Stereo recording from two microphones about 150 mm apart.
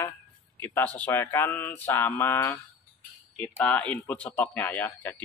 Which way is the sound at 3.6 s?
5° left (ahead or behind).